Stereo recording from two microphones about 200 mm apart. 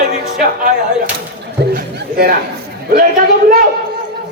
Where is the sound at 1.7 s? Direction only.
50° right (ahead or behind).